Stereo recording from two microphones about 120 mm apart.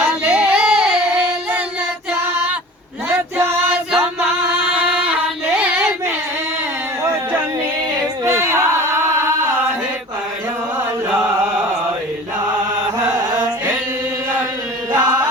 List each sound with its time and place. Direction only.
0.3 s singing: 10° right (ahead or behind)
3.1 s music: 20° right (ahead or behind)
4.6 s a sound: 10° right (ahead or behind)
8.2 s a sound: 25° right (ahead or behind)
13.1 s carnatic music: 35° right (ahead or behind)
14.9 s chant: 35° right (ahead or behind)